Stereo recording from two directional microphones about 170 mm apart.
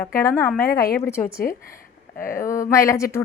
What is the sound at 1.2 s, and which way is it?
Speech, 60° left (ahead or behind).